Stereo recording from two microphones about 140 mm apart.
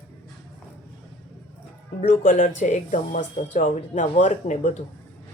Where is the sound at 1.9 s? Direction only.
75° left (ahead or behind).